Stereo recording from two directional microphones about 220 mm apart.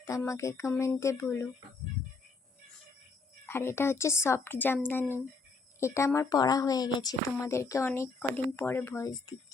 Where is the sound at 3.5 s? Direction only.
10° left (ahead or behind).